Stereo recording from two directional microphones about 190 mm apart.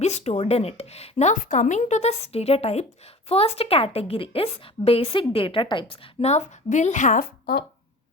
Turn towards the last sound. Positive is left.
turn(degrees=50)  # may be behind; listen again after turning